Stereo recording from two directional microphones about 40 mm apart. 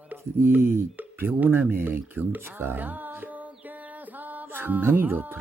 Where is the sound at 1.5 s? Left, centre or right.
Right.